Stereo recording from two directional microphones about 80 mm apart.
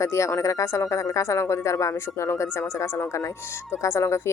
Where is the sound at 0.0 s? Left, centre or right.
Left.